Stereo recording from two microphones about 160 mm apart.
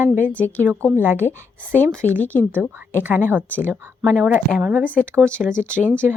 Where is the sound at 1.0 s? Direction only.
10° right (ahead or behind).